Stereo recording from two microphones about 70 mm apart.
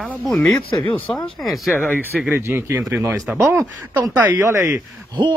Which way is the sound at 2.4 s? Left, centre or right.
Right.